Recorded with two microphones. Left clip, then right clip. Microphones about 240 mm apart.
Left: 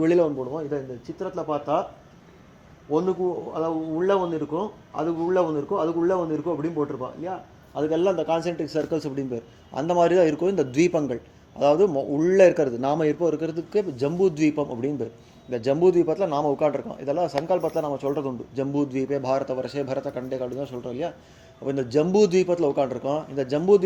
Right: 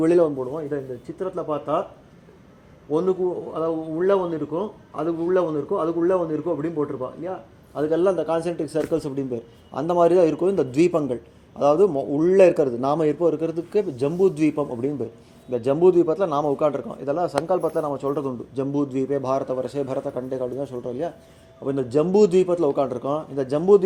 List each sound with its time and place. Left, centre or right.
0.0 s a man's voice: right
2.9 s a man's voice: right